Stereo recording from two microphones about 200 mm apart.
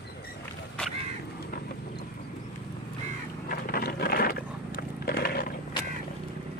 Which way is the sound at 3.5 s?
50° left (ahead or behind).